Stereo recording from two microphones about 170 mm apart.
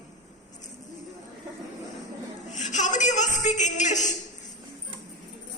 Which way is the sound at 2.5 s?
45° left (ahead or behind).